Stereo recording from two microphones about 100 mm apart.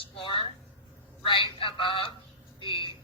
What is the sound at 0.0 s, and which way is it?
A woman's voice, 60° left (ahead or behind).